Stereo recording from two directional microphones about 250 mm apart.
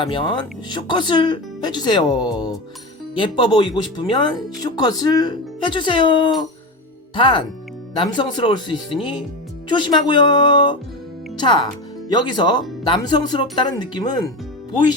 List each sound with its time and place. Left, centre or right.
0.0 s speech: centre